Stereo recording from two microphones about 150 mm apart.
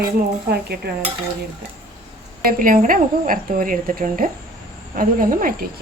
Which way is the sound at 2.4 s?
65° right (ahead or behind).